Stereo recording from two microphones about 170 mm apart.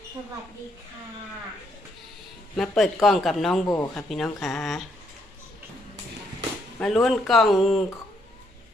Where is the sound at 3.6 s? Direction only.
20° left (ahead or behind).